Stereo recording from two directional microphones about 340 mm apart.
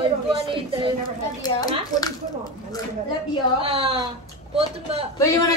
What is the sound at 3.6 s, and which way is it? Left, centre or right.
Speech, centre.